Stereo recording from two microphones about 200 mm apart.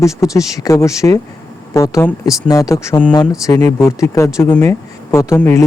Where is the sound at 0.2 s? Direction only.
15° left (ahead or behind).